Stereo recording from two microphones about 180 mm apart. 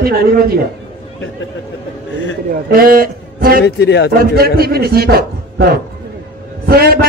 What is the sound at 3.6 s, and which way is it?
Speech, 70° left (ahead or behind).